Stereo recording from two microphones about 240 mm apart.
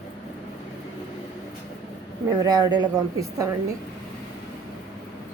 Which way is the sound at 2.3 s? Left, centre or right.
Centre.